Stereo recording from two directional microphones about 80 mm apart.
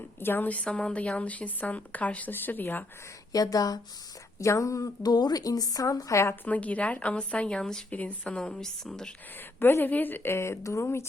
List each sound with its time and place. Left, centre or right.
0.2 s a woman's voice: left
3.3 s a woman's voice: left
4.4 s a woman's voice: left
6.4 s speech: centre
7.9 s speech: centre
9.6 s a woman's voice: left